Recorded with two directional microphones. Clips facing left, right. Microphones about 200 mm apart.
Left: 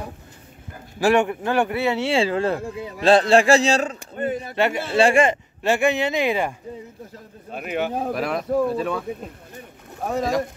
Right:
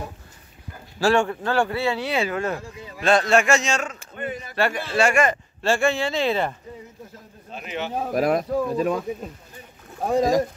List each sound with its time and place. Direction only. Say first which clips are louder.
0.9 s a man's voice: left 2 dB; 20° left (ahead or behind); by 4.5 s 35° left (ahead or behind)
4.6 s speech: left 2 dB; 20° left (ahead or behind)
5.6 s speech: left 1 dB; 20° left (ahead or behind)
7.5 s speech: left 5 dB; 50° left (ahead or behind)
8.1 s speech: right 2 dB; 45° right (ahead or behind)